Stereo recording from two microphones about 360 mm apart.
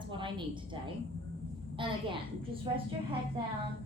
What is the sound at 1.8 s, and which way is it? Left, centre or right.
A woman's voice, centre.